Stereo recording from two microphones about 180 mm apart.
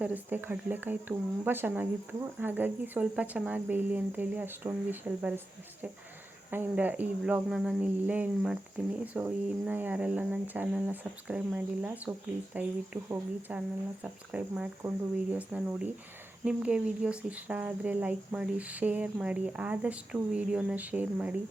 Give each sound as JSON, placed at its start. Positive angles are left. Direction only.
{"t": 0.0, "sound": "speech", "side_deg": -10}
{"t": 6.5, "sound": "speech", "side_deg": -10}